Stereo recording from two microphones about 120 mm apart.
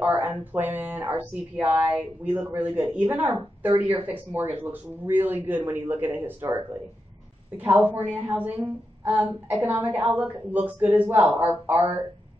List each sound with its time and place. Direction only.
0.0 s speech: 15° right (ahead or behind)